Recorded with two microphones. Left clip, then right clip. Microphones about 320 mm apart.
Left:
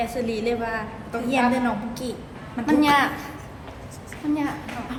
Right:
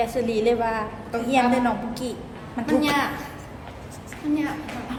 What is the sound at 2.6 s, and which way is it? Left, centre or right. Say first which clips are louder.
Speech: left 3 dB; left.